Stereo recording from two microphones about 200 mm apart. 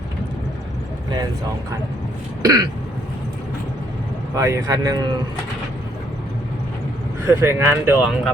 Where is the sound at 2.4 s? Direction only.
20° right (ahead or behind).